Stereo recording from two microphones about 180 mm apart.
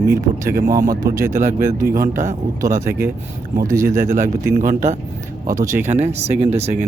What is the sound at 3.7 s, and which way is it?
Speech, 15° right (ahead or behind).